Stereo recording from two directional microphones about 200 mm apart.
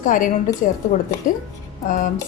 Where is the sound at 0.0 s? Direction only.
40° left (ahead or behind).